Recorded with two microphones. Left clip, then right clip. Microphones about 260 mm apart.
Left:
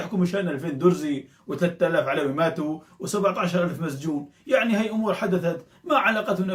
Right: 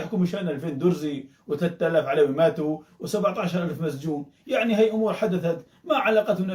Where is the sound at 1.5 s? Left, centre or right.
Centre.